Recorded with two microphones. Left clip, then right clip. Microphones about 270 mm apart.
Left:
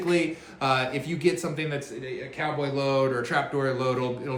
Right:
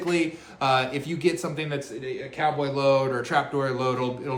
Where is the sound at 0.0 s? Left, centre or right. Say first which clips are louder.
Even; centre.